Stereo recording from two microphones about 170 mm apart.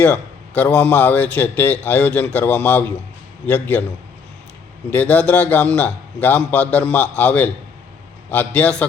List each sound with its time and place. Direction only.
0.0 s a man's voice: 10° left (ahead or behind)
4.9 s a man's voice: 10° left (ahead or behind)